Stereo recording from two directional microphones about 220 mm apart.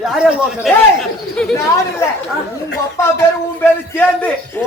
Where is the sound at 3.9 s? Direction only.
10° left (ahead or behind).